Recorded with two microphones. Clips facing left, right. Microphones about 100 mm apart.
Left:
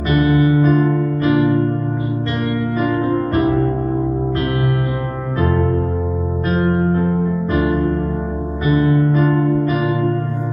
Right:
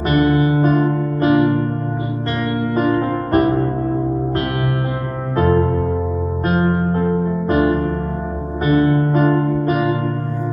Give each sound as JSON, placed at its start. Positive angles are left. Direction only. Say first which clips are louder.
{"t": 0.1, "sound": "music", "louder": "left 1 dB", "side_deg": -40}
{"t": 2.8, "sound": "music", "louder": "even", "side_deg": -45}
{"t": 6.5, "sound": "music", "louder": "left 1 dB", "side_deg": -40}